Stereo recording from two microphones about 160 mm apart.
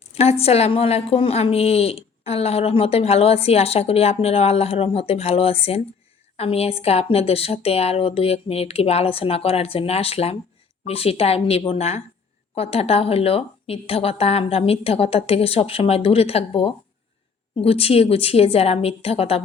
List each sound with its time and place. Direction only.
0.0 s a woman's voice: 40° left (ahead or behind)